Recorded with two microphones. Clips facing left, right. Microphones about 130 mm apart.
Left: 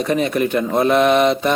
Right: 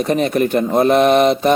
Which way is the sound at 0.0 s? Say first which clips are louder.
Right 2 dB; 40° right (ahead or behind).